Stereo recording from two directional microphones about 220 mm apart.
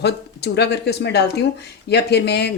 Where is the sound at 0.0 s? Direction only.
50° left (ahead or behind).